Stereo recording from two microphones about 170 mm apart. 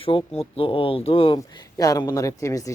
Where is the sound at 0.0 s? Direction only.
30° left (ahead or behind).